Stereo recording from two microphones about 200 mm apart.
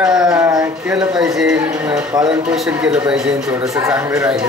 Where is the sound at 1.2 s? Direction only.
5° right (ahead or behind).